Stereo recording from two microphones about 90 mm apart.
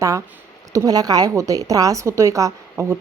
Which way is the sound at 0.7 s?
45° right (ahead or behind).